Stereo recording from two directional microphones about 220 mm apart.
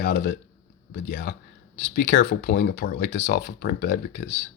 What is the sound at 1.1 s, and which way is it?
Speech, 50° left (ahead or behind).